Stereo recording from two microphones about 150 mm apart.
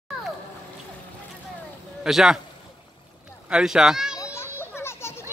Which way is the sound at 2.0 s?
5° right (ahead or behind).